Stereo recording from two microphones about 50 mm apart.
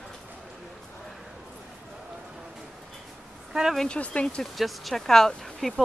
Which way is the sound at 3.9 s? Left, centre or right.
Left.